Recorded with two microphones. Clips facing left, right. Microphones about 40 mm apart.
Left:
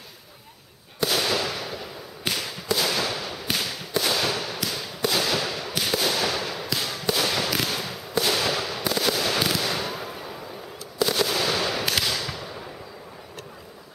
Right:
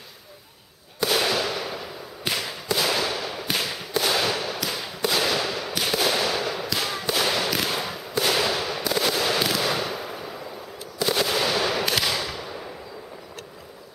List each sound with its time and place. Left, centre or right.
1.1 s fireworks: centre
2.3 s a sound: centre
3.0 s fireworks: centre
6.2 s fireworks: centre
6.8 s a sound: right
7.1 s fireworks: centre
7.7 s fireworks: centre
9.6 s a sound: centre
11.1 s fireworks: centre
12.0 s fireworks: centre